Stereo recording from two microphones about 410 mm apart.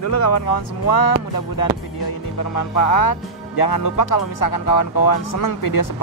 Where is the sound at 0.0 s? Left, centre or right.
Left.